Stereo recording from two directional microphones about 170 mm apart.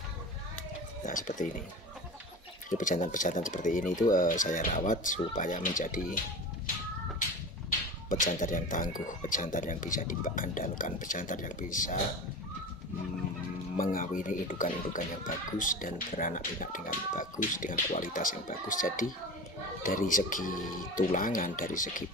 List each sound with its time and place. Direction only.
1.0 s speech: 50° left (ahead or behind)
2.8 s speech: 50° left (ahead or behind)
8.1 s speech: 50° left (ahead or behind)
13.7 s speech: 55° left (ahead or behind)